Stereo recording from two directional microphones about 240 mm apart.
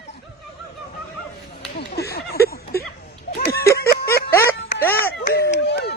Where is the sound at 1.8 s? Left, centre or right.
Left.